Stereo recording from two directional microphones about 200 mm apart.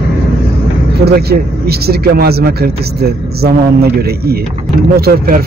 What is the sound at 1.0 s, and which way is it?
Speech, 50° right (ahead or behind).